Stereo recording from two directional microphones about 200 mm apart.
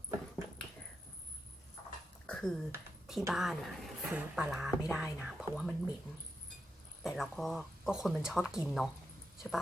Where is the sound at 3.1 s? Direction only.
Centre (ahead or behind).